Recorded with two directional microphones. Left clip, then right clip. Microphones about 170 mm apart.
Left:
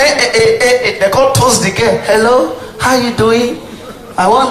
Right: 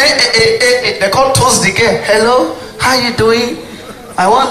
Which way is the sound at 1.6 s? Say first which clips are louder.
Right 1 dB; 55° left (ahead or behind).